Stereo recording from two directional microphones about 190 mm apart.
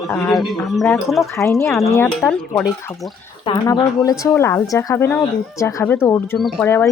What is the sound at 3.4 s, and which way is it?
Speech, 20° left (ahead or behind).